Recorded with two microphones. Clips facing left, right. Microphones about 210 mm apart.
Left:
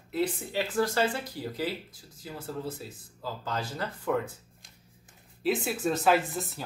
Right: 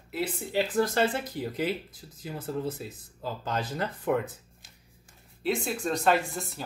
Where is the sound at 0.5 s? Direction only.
20° right (ahead or behind).